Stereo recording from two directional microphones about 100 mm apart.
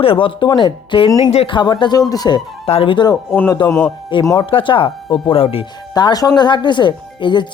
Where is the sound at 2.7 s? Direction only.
75° left (ahead or behind).